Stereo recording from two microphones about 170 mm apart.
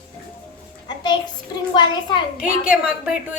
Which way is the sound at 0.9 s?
25° left (ahead or behind).